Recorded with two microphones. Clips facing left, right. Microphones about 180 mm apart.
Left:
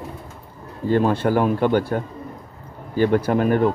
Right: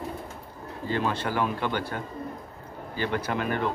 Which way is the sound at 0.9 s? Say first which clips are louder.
Left 9 dB; 50° left (ahead or behind).